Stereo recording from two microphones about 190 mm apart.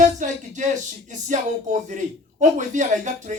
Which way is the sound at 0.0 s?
40° right (ahead or behind).